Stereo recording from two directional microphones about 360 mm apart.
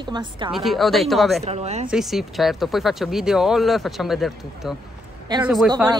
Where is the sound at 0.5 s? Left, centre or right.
Centre.